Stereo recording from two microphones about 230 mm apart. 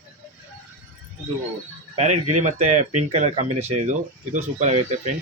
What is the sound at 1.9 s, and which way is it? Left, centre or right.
Speech, right.